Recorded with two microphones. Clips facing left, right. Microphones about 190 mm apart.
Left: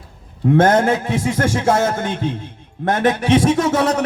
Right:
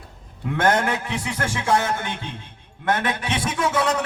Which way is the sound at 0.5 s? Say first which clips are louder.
Left 7 dB; 45° left (ahead or behind).